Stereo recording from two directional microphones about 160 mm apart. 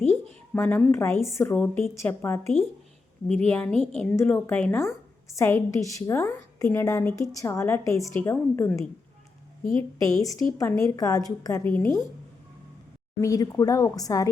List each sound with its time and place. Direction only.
0.1 s a sound: 10° left (ahead or behind)
0.8 s a woman's voice: 15° left (ahead or behind)
10.0 s a woman's voice: 20° left (ahead or behind)
13.2 s a woman's voice: 20° left (ahead or behind)